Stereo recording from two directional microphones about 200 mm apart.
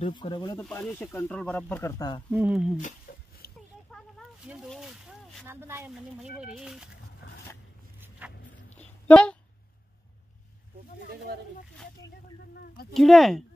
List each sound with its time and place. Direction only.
0.0 s speech: 25° left (ahead or behind)
0.6 s speech: 5° left (ahead or behind)
2.3 s speech: 5° right (ahead or behind)
3.1 s a sound: 45° left (ahead or behind)
3.9 s a sound: centre (ahead or behind)
5.5 s speech: 10° right (ahead or behind)
8.2 s dog: 10° right (ahead or behind)
8.7 s a sound: 5° left (ahead or behind)
12.9 s speech: centre (ahead or behind)